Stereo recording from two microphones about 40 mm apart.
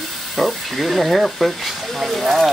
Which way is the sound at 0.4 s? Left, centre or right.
Centre.